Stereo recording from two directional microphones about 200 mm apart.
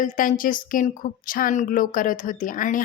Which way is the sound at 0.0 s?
40° left (ahead or behind).